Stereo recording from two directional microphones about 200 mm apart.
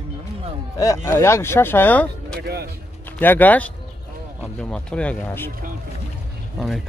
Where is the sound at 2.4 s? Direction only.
55° right (ahead or behind).